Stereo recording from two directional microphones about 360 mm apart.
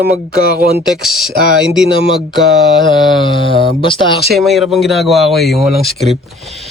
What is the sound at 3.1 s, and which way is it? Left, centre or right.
Mantra, centre.